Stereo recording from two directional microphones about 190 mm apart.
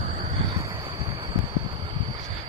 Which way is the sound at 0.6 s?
25° right (ahead or behind).